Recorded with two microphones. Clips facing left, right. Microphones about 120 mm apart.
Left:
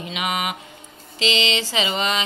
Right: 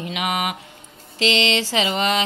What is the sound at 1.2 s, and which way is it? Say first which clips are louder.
Mantra: right 3 dB; 60° right (ahead or behind).